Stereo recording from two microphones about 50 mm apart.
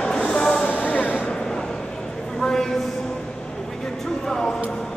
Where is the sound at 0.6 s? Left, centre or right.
Left.